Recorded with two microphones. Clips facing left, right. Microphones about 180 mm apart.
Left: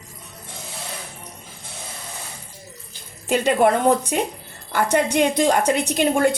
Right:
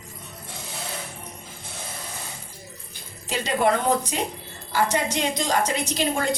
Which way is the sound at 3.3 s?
55° left (ahead or behind).